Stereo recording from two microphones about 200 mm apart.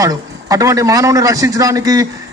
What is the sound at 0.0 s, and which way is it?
A man's voice, 15° right (ahead or behind).